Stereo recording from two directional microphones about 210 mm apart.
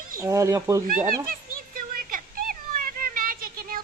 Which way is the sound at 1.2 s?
40° right (ahead or behind).